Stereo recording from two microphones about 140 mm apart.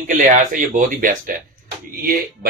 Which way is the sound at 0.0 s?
70° right (ahead or behind).